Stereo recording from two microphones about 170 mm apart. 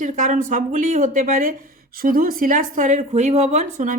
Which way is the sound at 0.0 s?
45° right (ahead or behind).